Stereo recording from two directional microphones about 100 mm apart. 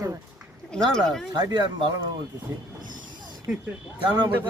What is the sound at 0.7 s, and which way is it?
Speech, 5° left (ahead or behind).